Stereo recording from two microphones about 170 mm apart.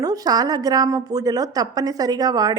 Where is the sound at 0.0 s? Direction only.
20° right (ahead or behind).